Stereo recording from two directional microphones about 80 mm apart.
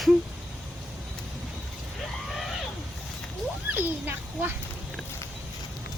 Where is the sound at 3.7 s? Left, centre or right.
Right.